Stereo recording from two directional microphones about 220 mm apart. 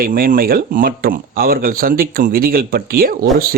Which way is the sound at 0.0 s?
40° right (ahead or behind).